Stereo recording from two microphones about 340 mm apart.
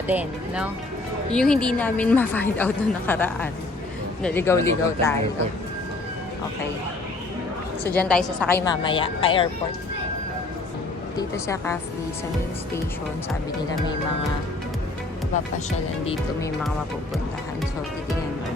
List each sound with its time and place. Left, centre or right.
0.1 s a woman's voice: centre
7.9 s a woman's voice: centre
11.2 s a woman's voice: centre